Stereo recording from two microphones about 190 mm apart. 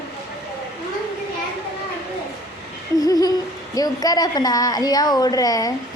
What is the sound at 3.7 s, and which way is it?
A woman's voice, 20° left (ahead or behind).